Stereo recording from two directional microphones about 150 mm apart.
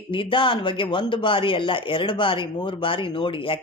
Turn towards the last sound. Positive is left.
turn(degrees=35)  # may be behind; listen again after turning